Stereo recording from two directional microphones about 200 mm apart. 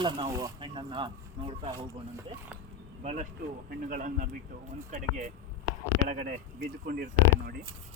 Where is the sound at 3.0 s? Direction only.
35° right (ahead or behind).